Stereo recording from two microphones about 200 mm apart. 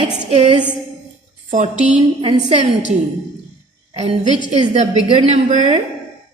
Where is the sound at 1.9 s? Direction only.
25° right (ahead or behind).